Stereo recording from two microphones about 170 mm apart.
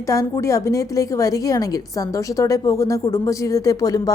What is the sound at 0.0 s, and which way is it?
A woman's voice, 20° left (ahead or behind).